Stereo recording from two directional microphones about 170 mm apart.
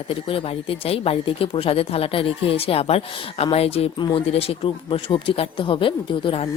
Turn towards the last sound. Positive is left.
turn(degrees=30)  # may be behind; listen again after turning